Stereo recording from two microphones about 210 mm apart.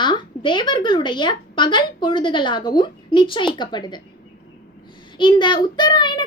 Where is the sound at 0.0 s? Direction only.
20° left (ahead or behind).